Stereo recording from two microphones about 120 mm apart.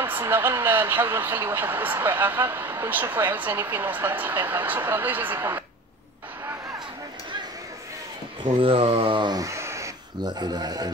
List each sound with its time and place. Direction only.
0.0 s speech: 20° right (ahead or behind)
8.4 s speech: 50° right (ahead or behind); by 9.8 s 25° right (ahead or behind)
10.2 s speech: 35° right (ahead or behind)